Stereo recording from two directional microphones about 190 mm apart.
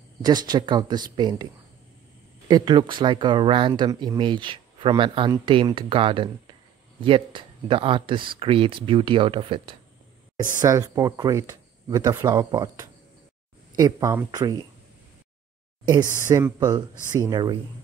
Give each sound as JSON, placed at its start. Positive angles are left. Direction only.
{"t": 0.2, "sound": "speech", "side_deg": -20}
{"t": 10.6, "sound": "speech", "side_deg": -15}
{"t": 16.3, "sound": "speech", "side_deg": -15}